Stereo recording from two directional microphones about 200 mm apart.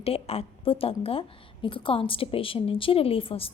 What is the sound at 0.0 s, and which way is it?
A woman's voice, 30° left (ahead or behind).